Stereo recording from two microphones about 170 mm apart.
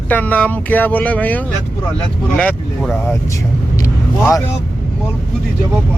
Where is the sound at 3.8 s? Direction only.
20° left (ahead or behind).